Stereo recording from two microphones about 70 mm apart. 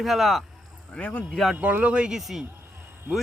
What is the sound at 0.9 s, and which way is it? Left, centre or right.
Speech, left.